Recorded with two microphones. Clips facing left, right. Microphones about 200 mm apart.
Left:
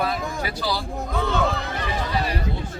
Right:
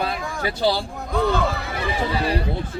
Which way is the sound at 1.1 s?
Centre (ahead or behind).